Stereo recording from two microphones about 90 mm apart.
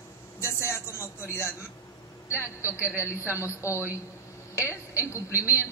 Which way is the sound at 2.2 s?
30° left (ahead or behind).